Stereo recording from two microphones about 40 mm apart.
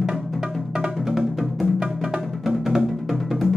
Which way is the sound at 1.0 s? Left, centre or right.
Centre.